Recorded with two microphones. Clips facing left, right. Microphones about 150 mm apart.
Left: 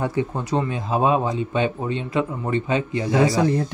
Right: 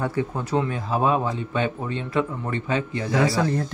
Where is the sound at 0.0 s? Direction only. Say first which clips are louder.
Left 2 dB; 15° left (ahead or behind).